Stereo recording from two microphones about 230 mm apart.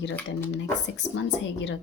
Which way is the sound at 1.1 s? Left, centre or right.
Left.